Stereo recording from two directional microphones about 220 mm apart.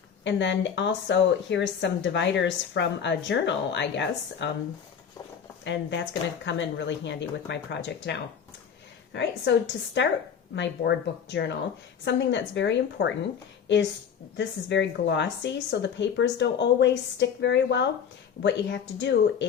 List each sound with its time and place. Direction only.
0.3 s a woman's voice: 55° left (ahead or behind)
5.6 s a woman's voice: 55° left (ahead or behind)
9.1 s a woman's voice: 50° left (ahead or behind)
14.3 s a woman's voice: 55° left (ahead or behind)